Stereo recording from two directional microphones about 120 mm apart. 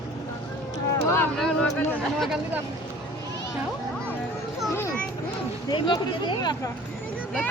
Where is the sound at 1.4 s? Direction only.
5° left (ahead or behind).